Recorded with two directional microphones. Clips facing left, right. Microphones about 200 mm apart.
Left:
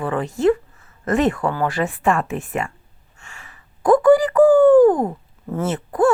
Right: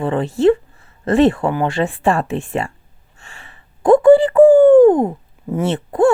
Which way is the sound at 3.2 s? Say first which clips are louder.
Right 1 dB; 35° right (ahead or behind).